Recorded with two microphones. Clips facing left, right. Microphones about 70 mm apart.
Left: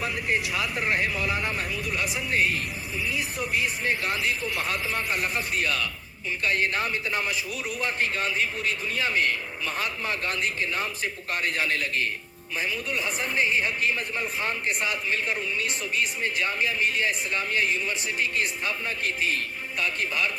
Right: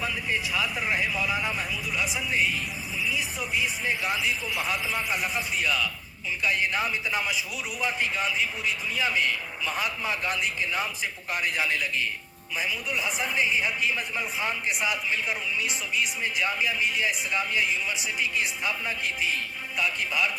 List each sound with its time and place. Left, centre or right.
0.5 s speech: centre
2.3 s speech: left
4.3 s a woman's voice: centre
9.6 s a woman's voice: centre
11.7 s speech: left
12.5 s a woman's voice: centre
16.8 s speech: left
19.0 s speech: left